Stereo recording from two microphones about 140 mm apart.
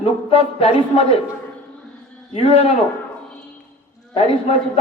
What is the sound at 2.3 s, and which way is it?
Speech, 45° left (ahead or behind).